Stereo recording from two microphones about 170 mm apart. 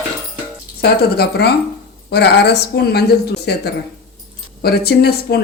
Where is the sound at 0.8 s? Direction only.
70° left (ahead or behind).